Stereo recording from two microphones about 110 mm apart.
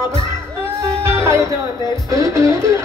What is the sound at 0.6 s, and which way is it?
Music, 25° right (ahead or behind).